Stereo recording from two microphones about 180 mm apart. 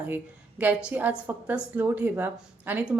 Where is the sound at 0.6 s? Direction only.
10° right (ahead or behind).